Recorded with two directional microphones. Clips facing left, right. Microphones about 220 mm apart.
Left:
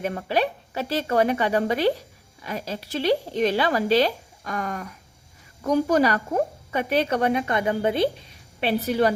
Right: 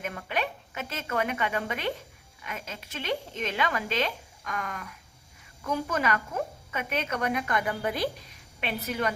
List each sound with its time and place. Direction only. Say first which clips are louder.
0.0 s a woman's voice: left 8 dB; 30° left (ahead or behind)